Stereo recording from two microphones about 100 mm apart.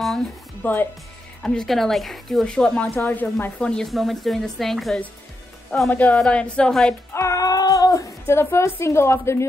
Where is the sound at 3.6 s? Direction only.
5° left (ahead or behind).